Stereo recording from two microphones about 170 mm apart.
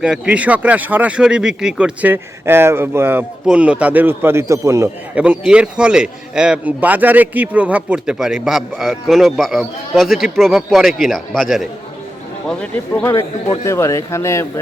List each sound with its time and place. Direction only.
0.0 s speech: 5° right (ahead or behind); by 14.6 s 15° left (ahead or behind)